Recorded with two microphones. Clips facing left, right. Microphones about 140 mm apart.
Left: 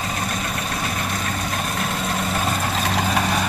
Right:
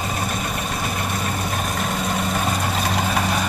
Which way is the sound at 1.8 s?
Centre (ahead or behind).